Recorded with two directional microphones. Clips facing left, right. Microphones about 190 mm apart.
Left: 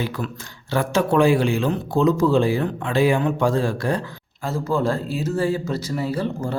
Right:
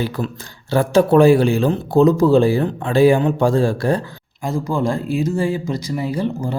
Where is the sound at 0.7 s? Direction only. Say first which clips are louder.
Right 6 dB; 35° right (ahead or behind).